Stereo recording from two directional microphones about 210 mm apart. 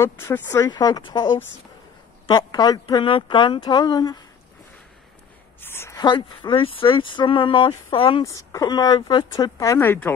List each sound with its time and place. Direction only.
0.0 s speech: 10° left (ahead or behind)
5.6 s speech: 10° left (ahead or behind)
8.2 s speech: 15° left (ahead or behind)